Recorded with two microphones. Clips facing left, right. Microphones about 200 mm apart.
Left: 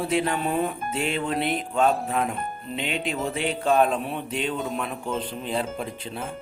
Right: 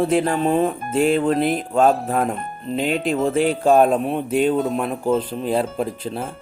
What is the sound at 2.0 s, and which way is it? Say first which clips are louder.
Speech: right 5 dB; 50° right (ahead or behind).